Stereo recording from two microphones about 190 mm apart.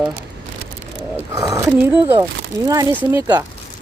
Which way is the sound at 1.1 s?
20° right (ahead or behind).